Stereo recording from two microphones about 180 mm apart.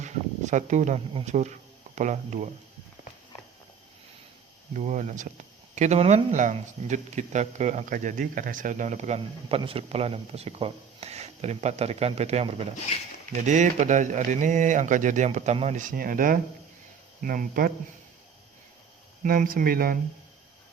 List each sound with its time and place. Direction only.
0.0 s speech: 40° right (ahead or behind)
4.7 s speech: 40° right (ahead or behind)
12.9 s speech: 35° left (ahead or behind)
13.3 s speech: 40° right (ahead or behind)
19.2 s speech: 50° right (ahead or behind)